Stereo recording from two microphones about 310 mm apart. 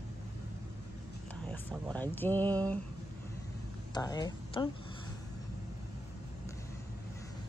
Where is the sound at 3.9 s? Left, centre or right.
Centre.